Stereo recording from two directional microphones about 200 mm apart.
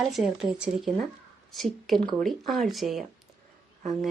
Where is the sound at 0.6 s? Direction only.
5° right (ahead or behind).